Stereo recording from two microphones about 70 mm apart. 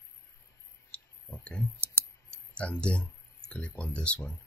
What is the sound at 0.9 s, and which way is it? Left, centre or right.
Clicking, centre.